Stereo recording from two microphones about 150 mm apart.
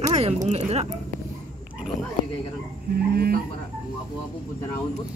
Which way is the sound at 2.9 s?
90° right.